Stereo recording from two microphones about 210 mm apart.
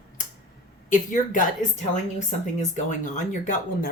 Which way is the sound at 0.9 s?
40° left (ahead or behind).